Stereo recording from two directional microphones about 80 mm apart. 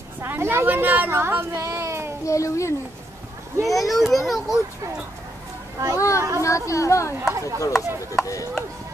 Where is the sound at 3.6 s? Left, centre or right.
Centre.